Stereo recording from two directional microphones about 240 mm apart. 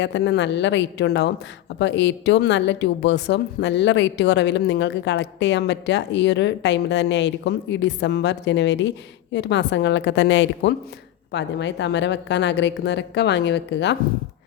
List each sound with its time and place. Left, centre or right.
0.0 s speech: left